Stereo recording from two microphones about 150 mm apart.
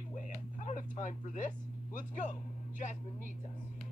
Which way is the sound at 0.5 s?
60° left (ahead or behind).